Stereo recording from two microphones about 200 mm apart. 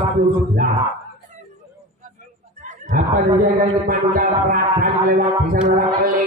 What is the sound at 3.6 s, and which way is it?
A man's voice, 45° right (ahead or behind).